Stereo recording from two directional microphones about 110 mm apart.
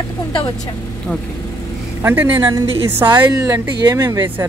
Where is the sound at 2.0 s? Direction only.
20° right (ahead or behind).